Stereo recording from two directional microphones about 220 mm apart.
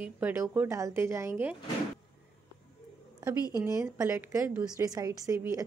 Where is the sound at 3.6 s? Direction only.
15° right (ahead or behind).